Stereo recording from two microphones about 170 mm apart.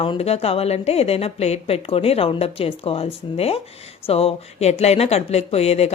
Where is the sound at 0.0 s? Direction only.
35° left (ahead or behind).